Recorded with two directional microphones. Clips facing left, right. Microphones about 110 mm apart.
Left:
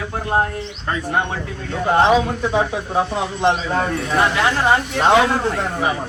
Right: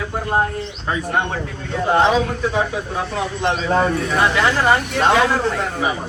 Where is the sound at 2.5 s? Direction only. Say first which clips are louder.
Left 2 dB; 25° left (ahead or behind).